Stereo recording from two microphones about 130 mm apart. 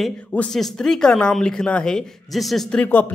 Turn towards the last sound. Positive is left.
turn(degrees=15)  # may be behind; listen again after turning